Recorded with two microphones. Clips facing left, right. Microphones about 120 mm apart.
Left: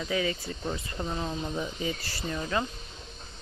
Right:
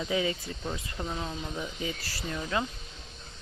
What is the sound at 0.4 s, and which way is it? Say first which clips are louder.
Speech: left 2 dB; 5° left (ahead or behind).